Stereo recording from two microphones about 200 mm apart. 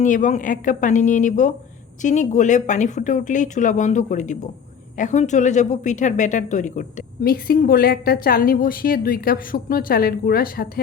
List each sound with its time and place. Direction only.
0.0 s a woman's voice: 40° left (ahead or behind)